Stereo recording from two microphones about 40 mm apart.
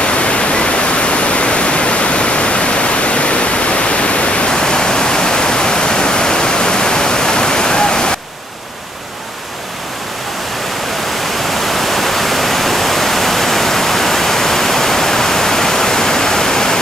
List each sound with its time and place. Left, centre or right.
0.0 s pink noise: left
11.7 s pink noise: centre